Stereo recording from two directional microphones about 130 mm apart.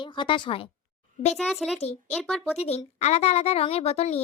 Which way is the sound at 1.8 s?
55° left (ahead or behind).